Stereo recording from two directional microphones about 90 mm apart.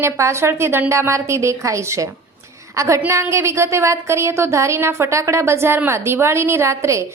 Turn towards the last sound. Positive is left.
turn(degrees=-30)  # may be behind; listen again after turning